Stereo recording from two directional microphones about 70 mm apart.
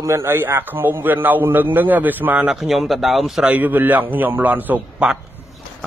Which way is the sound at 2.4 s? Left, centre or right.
Centre.